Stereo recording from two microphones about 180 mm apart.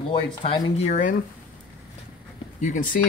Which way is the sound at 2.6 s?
45° left (ahead or behind).